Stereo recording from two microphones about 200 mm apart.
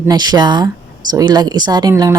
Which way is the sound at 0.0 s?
20° right (ahead or behind).